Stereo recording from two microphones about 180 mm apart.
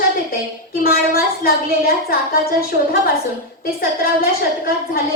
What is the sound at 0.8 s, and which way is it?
A woman's voice, 55° left (ahead or behind).